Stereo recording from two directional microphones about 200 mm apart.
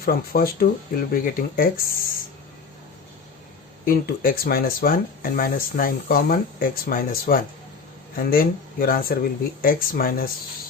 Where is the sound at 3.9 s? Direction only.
45° left (ahead or behind).